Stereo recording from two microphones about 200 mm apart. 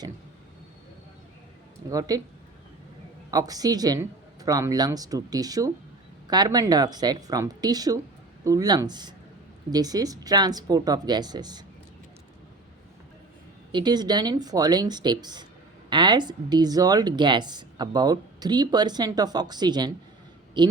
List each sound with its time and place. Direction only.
1.9 s speech: 15° right (ahead or behind)
3.3 s speech: 20° right (ahead or behind)
13.7 s speech: 20° right (ahead or behind)